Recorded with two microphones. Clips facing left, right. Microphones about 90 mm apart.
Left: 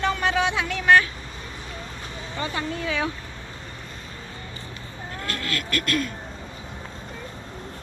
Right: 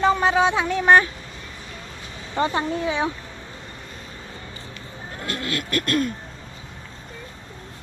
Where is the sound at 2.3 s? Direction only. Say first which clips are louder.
Right 8 dB; 40° right (ahead or behind).